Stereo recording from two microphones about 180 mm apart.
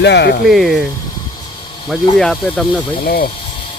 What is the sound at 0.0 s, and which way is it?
Speech, 70° left (ahead or behind).